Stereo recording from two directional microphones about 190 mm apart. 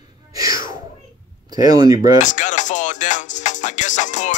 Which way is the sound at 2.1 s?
40° left (ahead or behind).